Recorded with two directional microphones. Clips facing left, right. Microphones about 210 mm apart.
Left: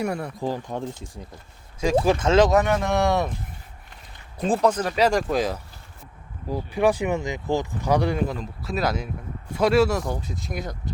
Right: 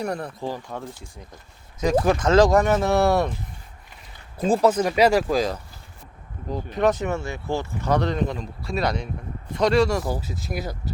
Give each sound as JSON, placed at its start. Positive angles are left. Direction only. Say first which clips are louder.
{"t": 0.0, "sound": "speech", "louder": "left 1 dB", "side_deg": 10}
{"t": 2.2, "sound": "speech", "louder": "right 2 dB", "side_deg": 25}
{"t": 2.6, "sound": "speech", "louder": "right 2 dB", "side_deg": -5}
{"t": 4.4, "sound": "speech", "louder": "right 2 dB", "side_deg": 0}